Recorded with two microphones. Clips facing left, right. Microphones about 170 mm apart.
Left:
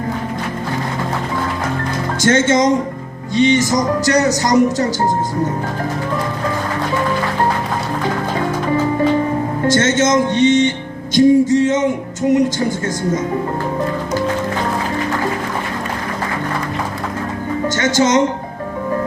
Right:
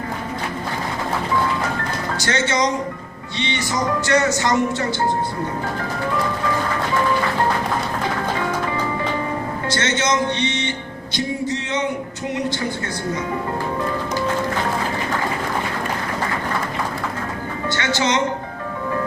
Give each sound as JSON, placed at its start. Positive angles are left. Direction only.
{"t": 2.2, "sound": "music", "side_deg": 50}
{"t": 3.3, "sound": "speech", "side_deg": 45}
{"t": 9.6, "sound": "speech", "side_deg": 45}
{"t": 11.1, "sound": "music", "side_deg": 45}
{"t": 17.7, "sound": "music", "side_deg": 40}